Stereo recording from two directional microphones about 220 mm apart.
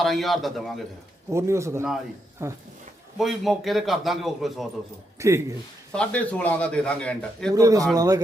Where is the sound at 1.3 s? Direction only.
15° right (ahead or behind).